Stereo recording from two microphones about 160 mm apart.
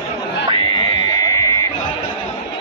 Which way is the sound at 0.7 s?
25° left (ahead or behind).